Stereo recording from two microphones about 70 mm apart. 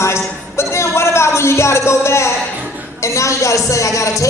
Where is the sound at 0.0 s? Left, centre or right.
Left.